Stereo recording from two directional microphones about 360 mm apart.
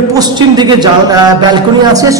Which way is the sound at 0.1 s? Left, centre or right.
Centre.